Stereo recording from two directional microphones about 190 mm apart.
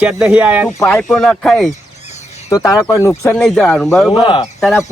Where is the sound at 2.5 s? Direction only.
15° left (ahead or behind); by 3.8 s centre (ahead or behind).